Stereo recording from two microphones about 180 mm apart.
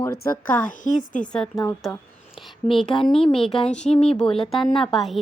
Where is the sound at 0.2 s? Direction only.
45° left (ahead or behind).